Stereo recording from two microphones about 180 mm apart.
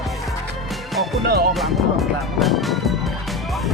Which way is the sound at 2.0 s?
Centre (ahead or behind).